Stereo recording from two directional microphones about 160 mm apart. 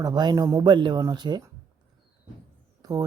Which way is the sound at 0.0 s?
25° right (ahead or behind).